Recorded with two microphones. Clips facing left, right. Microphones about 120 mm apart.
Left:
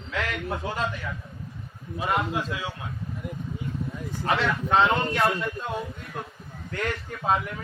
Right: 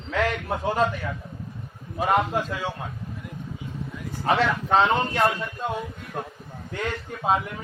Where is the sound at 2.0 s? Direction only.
50° right (ahead or behind).